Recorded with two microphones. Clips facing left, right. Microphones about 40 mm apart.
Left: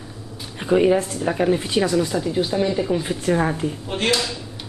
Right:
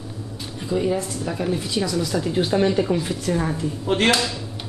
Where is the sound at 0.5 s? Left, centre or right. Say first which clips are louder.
Left 6 dB; left.